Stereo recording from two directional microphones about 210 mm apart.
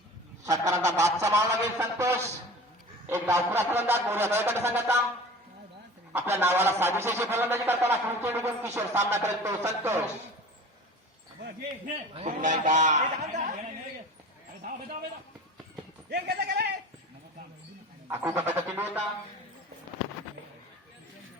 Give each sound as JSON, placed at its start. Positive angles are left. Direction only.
{"t": 0.4, "sound": "a man's voice", "side_deg": -15}
{"t": 6.1, "sound": "a man's voice", "side_deg": -10}
{"t": 12.1, "sound": "speech", "side_deg": -35}
{"t": 16.0, "sound": "speech", "side_deg": -50}
{"t": 18.1, "sound": "a man's voice", "side_deg": -10}